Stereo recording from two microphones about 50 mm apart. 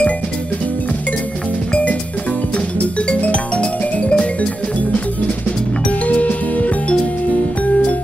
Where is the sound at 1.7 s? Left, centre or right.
Left.